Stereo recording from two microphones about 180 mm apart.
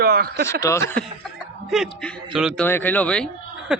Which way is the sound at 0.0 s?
60° right (ahead or behind).